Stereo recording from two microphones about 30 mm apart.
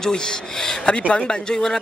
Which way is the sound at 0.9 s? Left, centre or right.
Left.